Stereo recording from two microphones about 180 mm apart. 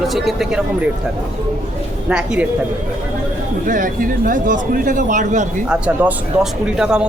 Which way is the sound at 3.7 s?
45° right (ahead or behind).